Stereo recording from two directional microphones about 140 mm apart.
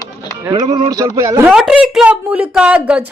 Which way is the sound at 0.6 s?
50° right (ahead or behind).